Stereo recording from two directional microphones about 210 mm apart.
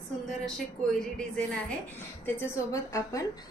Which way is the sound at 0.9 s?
5° left (ahead or behind).